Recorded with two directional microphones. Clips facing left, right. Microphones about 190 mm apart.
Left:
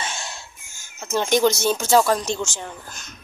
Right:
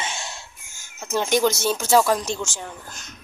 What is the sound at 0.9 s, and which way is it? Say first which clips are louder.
Speech: left 1 dB; 5° right (ahead or behind).